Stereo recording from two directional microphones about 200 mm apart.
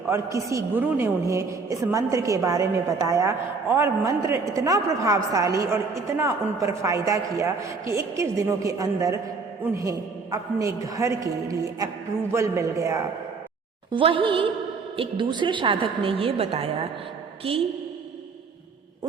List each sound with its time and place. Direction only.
0.1 s a woman's voice: 15° right (ahead or behind)
13.9 s a woman's voice: 25° right (ahead or behind)